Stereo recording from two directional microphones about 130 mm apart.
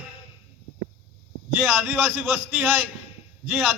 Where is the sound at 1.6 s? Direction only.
10° right (ahead or behind).